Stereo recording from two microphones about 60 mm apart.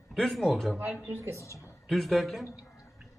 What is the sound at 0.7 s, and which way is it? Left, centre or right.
Speech, centre.